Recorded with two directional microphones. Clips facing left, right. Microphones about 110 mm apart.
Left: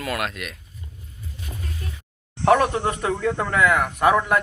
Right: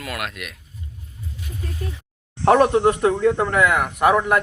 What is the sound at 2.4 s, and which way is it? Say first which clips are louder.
Speech: right 4 dB; 25° right (ahead or behind).